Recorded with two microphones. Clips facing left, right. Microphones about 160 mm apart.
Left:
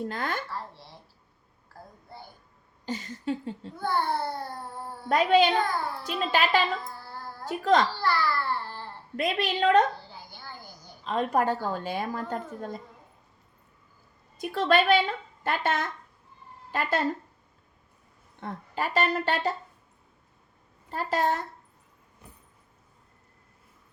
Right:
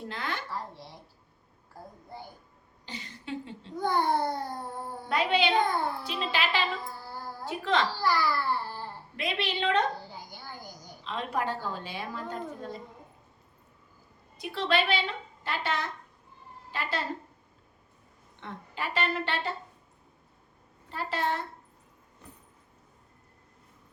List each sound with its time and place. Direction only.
0.1 s speech: 45° left (ahead or behind)
2.8 s a woman's voice: 45° left (ahead or behind)
3.8 s a child's voice: 15° right (ahead or behind)
5.0 s a woman's voice: 45° left (ahead or behind)
6.8 s a sound: 10° right (ahead or behind)
7.4 s a child's voice: 45° left (ahead or behind)
7.9 s babbling: 10° right (ahead or behind)
9.1 s a woman's voice: 45° left (ahead or behind)
10.1 s a sound: 15° right (ahead or behind)
11.0 s a woman's voice: 45° left (ahead or behind)
14.3 s a woman's voice: 45° left (ahead or behind)
18.3 s speech: 40° left (ahead or behind)
20.9 s speech: 40° left (ahead or behind)